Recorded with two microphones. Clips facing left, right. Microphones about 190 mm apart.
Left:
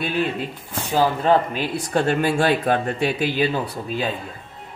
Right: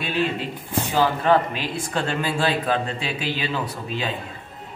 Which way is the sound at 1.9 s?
50° left (ahead or behind).